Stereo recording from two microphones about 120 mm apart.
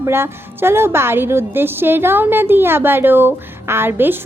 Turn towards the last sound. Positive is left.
turn(degrees=-15)  # may be behind; listen again after turning